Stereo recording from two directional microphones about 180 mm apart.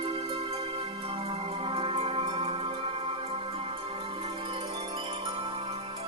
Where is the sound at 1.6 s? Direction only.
30° right (ahead or behind).